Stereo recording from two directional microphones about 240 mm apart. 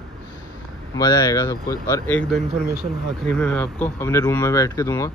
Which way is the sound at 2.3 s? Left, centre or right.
Right.